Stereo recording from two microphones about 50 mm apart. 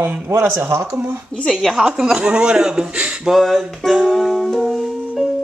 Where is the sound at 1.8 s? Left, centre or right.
Centre.